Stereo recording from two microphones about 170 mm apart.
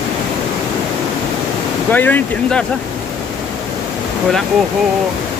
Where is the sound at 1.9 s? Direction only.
10° left (ahead or behind).